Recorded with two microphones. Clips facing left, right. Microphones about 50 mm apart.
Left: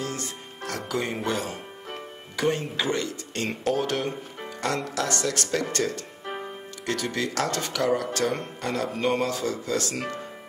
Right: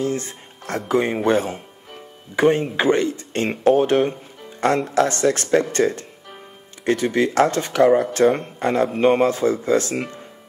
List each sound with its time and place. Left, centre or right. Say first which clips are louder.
0.0 s speech: right 8 dB; right
6.2 s music: left 7 dB; left
6.9 s speech: right 9 dB; right